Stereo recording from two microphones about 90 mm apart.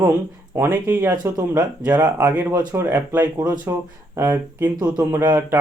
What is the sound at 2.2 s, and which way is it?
Speech, 20° right (ahead or behind).